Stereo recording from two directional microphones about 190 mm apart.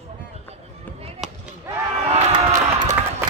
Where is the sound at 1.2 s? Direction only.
Centre (ahead or behind).